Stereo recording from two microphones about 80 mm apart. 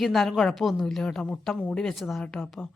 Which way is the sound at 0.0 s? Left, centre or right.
Centre.